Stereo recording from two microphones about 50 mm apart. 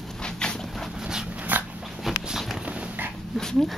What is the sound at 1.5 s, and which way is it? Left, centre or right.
Dog, right.